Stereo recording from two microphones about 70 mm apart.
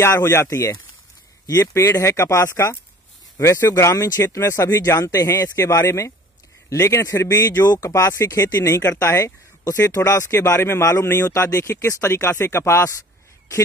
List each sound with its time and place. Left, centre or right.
0.0 s speech: left
4.4 s speech: left
7.6 s speech: left